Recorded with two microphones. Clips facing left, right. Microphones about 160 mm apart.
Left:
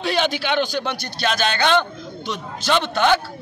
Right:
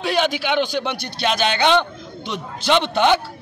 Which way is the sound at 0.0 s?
10° right (ahead or behind).